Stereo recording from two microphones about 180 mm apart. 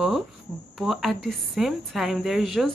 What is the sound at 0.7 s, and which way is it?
A woman's voice, centre (ahead or behind).